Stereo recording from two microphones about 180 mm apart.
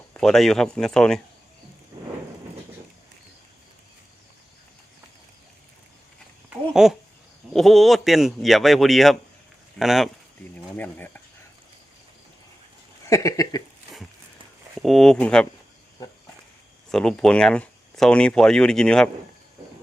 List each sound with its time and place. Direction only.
0.1 s speech: 5° left (ahead or behind)
6.5 s babbling: 5° right (ahead or behind)
7.5 s speech: centre (ahead or behind)
10.8 s speech: 10° left (ahead or behind)
13.1 s a sound: 15° left (ahead or behind)
14.8 s speech: centre (ahead or behind)
16.9 s speech: 5° left (ahead or behind)